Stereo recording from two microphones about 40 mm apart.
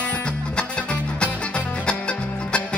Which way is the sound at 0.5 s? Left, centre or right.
Left.